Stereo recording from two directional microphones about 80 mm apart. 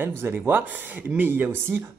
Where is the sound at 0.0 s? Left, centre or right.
Right.